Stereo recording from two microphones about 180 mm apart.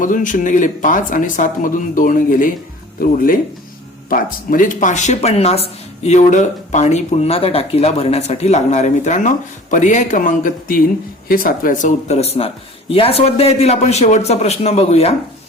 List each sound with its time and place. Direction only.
0.0 s speech: 45° left (ahead or behind)